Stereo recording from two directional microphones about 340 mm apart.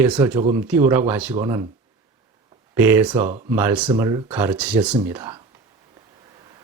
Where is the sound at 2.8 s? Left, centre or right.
Centre.